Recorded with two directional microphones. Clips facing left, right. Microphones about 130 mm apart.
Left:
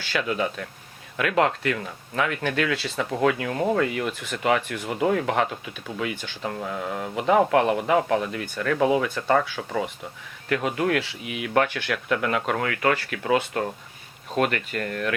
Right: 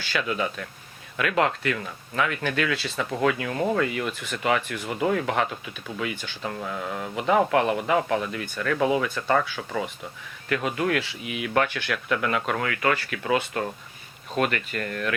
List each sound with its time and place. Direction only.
0.1 s speech: 45° left (ahead or behind)
6.4 s speech: 30° left (ahead or behind)